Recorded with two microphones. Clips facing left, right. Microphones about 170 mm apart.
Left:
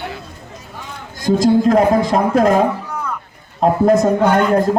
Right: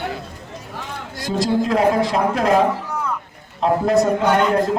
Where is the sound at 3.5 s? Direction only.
45° left (ahead or behind).